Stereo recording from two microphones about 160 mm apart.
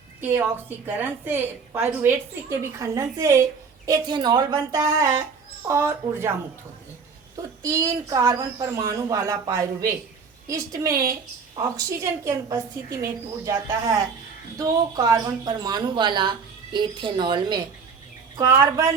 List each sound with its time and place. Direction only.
0.2 s a woman's voice: 15° right (ahead or behind)
7.6 s speech: 15° right (ahead or behind)